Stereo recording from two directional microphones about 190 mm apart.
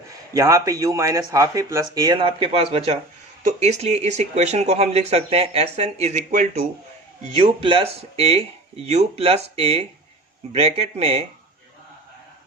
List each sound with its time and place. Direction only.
0.3 s speech: 15° right (ahead or behind)